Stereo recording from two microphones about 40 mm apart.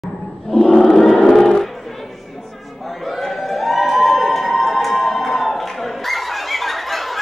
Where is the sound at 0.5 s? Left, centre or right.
Centre.